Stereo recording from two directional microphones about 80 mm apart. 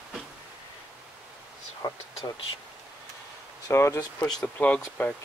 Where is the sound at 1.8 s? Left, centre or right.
Left.